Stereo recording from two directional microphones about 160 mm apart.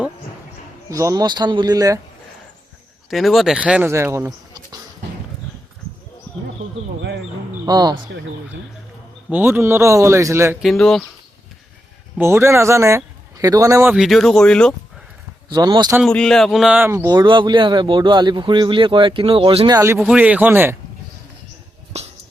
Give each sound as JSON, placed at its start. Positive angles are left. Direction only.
{"t": 0.9, "sound": "a man's voice", "side_deg": -20}
{"t": 3.1, "sound": "speech", "side_deg": 0}
{"t": 3.9, "sound": "bleat", "side_deg": -15}
{"t": 7.6, "sound": "speech", "side_deg": -25}
{"t": 9.3, "sound": "speech", "side_deg": -15}
{"t": 10.6, "sound": "speech", "side_deg": 0}
{"t": 12.1, "sound": "a man's voice", "side_deg": -15}
{"t": 13.9, "sound": "speech", "side_deg": 0}
{"t": 15.4, "sound": "a man's voice", "side_deg": -25}
{"t": 16.0, "sound": "speech", "side_deg": 5}
{"t": 17.1, "sound": "speech", "side_deg": -30}
{"t": 19.7, "sound": "speech", "side_deg": -20}
{"t": 20.0, "sound": "speech", "side_deg": -5}
{"t": 21.9, "sound": "a sound", "side_deg": -40}